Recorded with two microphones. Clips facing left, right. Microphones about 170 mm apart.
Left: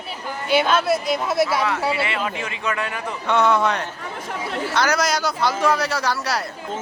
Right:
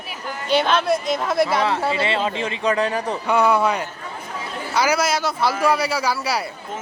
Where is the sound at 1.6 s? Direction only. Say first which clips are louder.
Right 2 dB; 30° right (ahead or behind).